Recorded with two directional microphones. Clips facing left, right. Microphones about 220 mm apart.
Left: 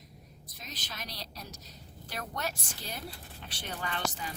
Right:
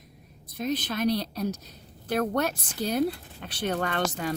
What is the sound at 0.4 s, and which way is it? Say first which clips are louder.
A woman's voice: right 19 dB; 55° right (ahead or behind).